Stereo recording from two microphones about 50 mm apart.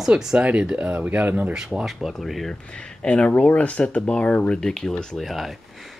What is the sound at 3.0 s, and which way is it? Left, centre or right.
Speech, left.